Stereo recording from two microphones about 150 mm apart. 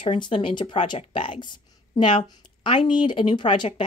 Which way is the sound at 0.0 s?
35° left (ahead or behind).